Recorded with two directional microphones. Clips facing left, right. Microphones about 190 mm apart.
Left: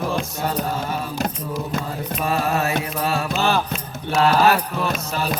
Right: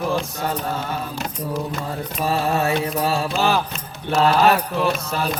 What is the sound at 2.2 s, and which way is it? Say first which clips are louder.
Mantra: right 1 dB; 30° right (ahead or behind).